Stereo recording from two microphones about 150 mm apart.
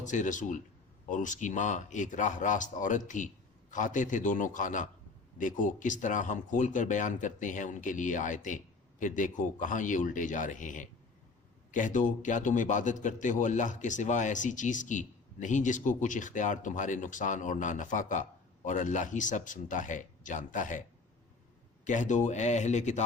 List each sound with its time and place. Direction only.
0.0 s a man's voice: 55° left (ahead or behind)
21.8 s speech: 55° left (ahead or behind)